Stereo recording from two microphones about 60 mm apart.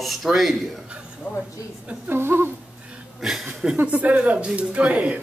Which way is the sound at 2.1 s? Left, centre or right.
Right.